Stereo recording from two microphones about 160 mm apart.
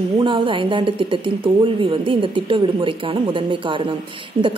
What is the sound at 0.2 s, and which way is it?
A woman's voice, 30° right (ahead or behind).